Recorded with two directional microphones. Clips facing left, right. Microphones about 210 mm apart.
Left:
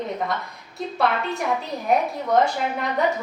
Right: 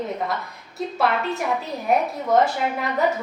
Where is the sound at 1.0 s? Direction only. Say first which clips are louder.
Even; centre (ahead or behind).